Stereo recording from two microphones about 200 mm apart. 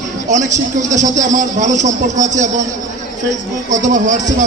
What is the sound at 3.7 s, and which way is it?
Speech, 40° right (ahead or behind).